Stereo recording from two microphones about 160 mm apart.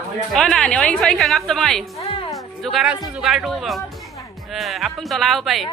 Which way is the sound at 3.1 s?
Centre (ahead or behind).